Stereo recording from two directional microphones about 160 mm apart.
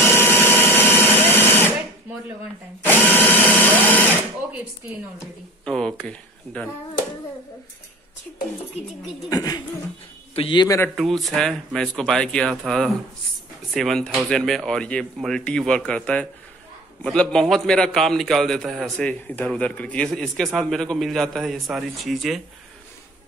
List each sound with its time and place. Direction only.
0.0 s a sound: 15° left (ahead or behind)
2.8 s drill: 10° left (ahead or behind)
5.7 s a man's voice: 5° left (ahead or behind)
8.8 s speech: 40° left (ahead or behind)
9.3 s a man's voice: 25° left (ahead or behind)
11.0 s a man's voice: centre (ahead or behind)